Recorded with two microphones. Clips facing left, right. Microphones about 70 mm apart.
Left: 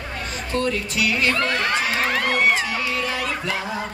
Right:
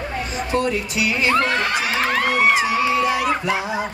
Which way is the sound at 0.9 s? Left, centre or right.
Centre.